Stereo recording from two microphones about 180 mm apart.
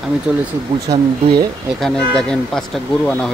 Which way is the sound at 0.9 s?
20° right (ahead or behind).